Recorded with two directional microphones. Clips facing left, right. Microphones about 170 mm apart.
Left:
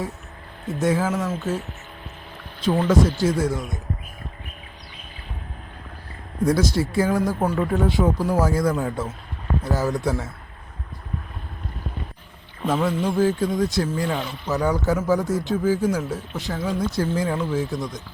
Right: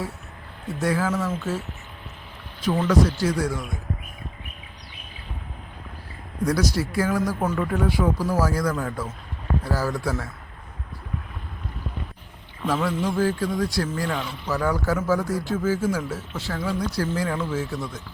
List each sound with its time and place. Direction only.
0.7 s speech: 20° left (ahead or behind)
2.8 s speech: 25° left (ahead or behind)
6.4 s speech: 25° left (ahead or behind)
12.6 s speech: 20° left (ahead or behind)